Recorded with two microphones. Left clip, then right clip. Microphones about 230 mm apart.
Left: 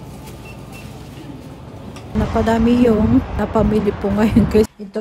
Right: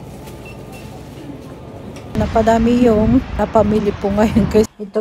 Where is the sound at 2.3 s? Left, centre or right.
Centre.